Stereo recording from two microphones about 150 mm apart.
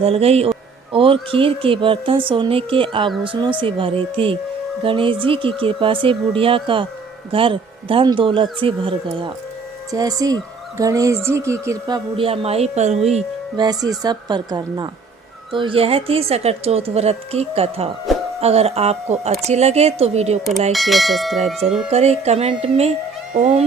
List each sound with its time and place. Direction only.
0.0 s speech: 40° right (ahead or behind)
9.9 s speech: 25° right (ahead or behind)
12.1 s speech: 40° right (ahead or behind)
13.6 s speech: 30° right (ahead or behind); by 20.4 s 45° right (ahead or behind)
20.7 s speech: centre (ahead or behind)
21.8 s speech: 45° right (ahead or behind)